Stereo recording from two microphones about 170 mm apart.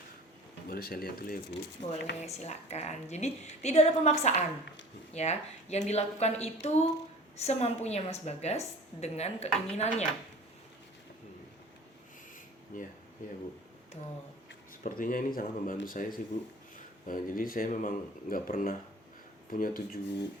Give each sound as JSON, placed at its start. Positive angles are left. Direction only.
{"t": 0.7, "sound": "speech", "side_deg": 60}
{"t": 1.8, "sound": "speech", "side_deg": 85}
{"t": 2.2, "sound": "a woman's voice", "side_deg": 40}
{"t": 12.7, "sound": "speech", "side_deg": 55}
{"t": 14.8, "sound": "speech", "side_deg": 55}